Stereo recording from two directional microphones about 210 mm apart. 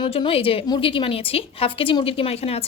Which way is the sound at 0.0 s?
25° left (ahead or behind).